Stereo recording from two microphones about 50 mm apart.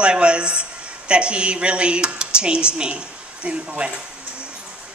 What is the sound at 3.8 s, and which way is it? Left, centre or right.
Speech, right.